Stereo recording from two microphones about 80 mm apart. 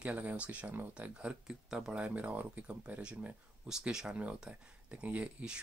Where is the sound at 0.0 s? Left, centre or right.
Centre.